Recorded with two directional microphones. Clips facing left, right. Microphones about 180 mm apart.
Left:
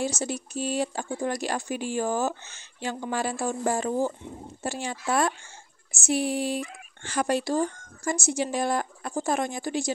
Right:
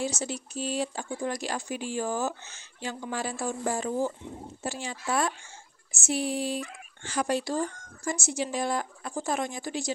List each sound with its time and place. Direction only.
0.0 s a woman's voice: 50° left (ahead or behind)